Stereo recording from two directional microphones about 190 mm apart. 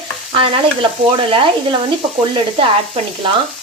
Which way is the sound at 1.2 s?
25° right (ahead or behind).